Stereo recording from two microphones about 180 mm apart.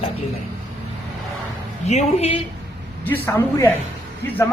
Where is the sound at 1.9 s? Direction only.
35° left (ahead or behind).